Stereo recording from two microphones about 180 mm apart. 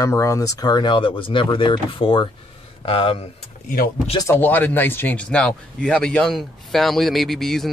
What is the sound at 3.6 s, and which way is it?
Speech, 55° left (ahead or behind).